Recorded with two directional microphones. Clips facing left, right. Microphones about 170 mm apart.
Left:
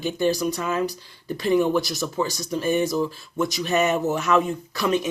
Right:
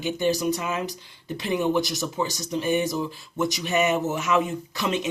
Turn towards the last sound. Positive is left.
turn(degrees=-20)  # may be behind; listen again after turning